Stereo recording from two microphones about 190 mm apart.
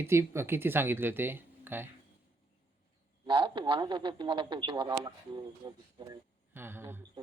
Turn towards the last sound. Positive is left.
turn(degrees=-10)  # may be behind; listen again after turning